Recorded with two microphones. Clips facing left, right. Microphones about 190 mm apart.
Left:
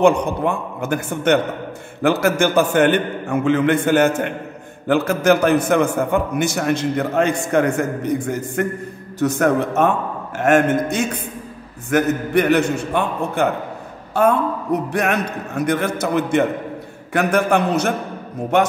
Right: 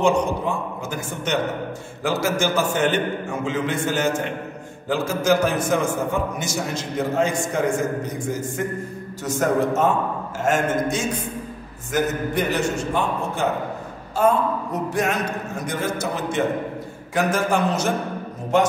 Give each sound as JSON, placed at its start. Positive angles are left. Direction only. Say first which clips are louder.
{"t": 0.0, "sound": "a man's voice", "louder": "left 4 dB", "side_deg": 60}